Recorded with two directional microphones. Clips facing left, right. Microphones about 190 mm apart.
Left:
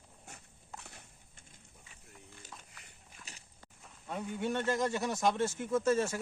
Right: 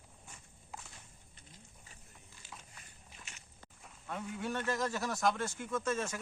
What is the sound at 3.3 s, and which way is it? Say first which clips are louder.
Biting: left 2 dB; 35° left (ahead or behind).